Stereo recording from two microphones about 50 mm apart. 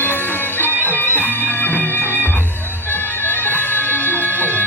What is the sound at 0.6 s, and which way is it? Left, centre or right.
Music, left.